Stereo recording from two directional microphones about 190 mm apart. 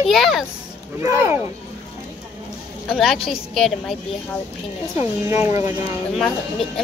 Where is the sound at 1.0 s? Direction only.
15° right (ahead or behind).